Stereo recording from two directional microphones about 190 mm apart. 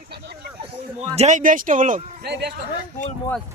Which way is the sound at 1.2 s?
40° right (ahead or behind).